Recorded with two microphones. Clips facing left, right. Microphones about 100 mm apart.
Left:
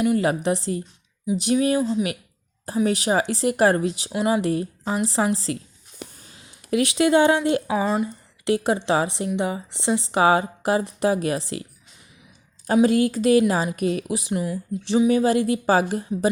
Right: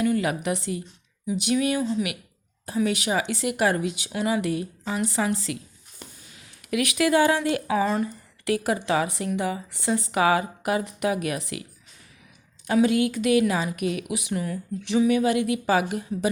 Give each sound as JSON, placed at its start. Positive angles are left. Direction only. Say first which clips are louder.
{"t": 0.0, "sound": "a woman's voice", "louder": "left 3 dB", "side_deg": 30}
{"t": 12.6, "sound": "a woman's voice", "louder": "left 3 dB", "side_deg": 35}
{"t": 14.3, "sound": "a woman's voice", "louder": "left 2 dB", "side_deg": 25}